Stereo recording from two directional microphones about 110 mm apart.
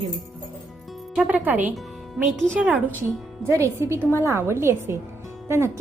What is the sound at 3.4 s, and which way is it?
A woman's voice, 25° right (ahead or behind).